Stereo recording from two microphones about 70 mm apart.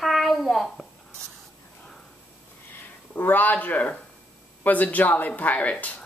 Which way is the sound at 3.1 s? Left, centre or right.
Left.